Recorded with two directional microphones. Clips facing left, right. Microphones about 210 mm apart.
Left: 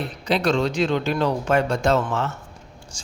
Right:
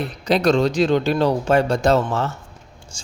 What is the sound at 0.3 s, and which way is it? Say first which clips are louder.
Speech: right 4 dB; 40° right (ahead or behind).